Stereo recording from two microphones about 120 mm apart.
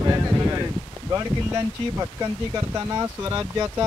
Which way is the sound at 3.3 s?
25° right (ahead or behind).